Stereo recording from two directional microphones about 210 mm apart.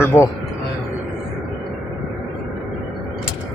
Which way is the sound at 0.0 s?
10° left (ahead or behind).